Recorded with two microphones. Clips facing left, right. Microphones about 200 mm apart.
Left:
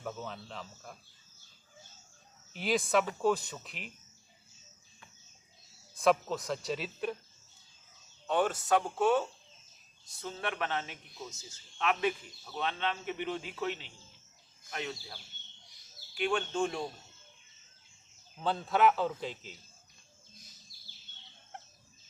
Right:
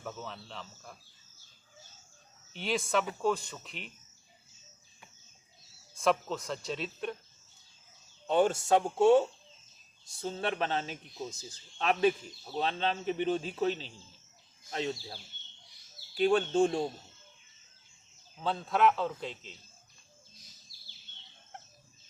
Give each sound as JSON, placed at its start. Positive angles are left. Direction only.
{"t": 0.0, "sound": "speech", "side_deg": 0}
{"t": 2.5, "sound": "speech", "side_deg": 0}
{"t": 6.0, "sound": "speech", "side_deg": 0}
{"t": 8.3, "sound": "a man's voice", "side_deg": -25}
{"t": 18.3, "sound": "speech", "side_deg": 0}